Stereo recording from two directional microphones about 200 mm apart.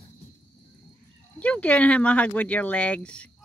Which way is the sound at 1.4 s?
5° left (ahead or behind).